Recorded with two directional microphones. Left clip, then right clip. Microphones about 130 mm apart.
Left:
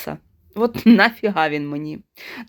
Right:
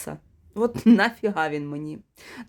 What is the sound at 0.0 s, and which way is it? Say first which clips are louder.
Speech: left 6 dB; 15° left (ahead or behind).